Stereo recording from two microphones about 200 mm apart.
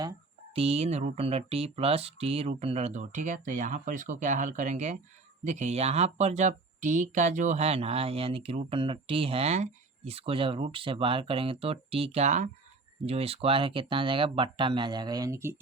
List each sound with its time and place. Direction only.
0.0 s speech: 25° right (ahead or behind)